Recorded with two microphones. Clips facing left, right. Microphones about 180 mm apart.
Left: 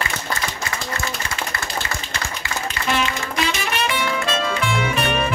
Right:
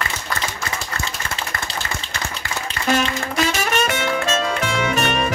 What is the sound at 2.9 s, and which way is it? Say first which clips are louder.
Music: right 3 dB; 45° right (ahead or behind).